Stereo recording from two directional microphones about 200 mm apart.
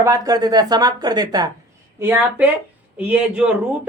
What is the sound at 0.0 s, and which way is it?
Speech, 15° right (ahead or behind).